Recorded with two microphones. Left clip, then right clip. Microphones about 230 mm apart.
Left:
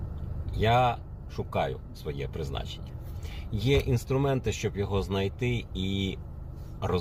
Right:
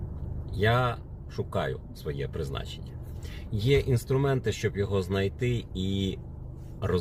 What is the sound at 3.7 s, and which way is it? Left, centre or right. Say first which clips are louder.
Speech: right 1 dB; right.